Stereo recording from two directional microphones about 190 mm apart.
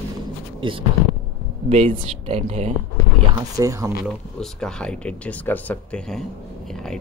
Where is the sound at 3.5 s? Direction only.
15° right (ahead or behind).